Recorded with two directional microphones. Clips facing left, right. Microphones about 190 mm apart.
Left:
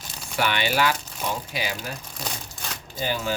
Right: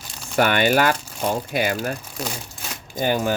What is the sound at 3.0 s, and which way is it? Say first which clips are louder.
Speech: right 6 dB; 50° right (ahead or behind).